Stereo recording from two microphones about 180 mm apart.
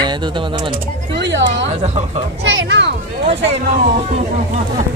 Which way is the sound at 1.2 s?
85° right.